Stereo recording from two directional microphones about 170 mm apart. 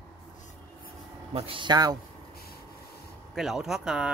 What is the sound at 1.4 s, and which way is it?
Speech, 30° right (ahead or behind).